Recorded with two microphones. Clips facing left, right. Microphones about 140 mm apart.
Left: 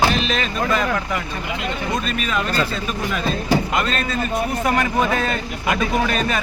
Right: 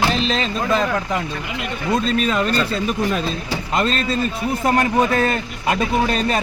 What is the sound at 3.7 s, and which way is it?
Speech, 30° right (ahead or behind).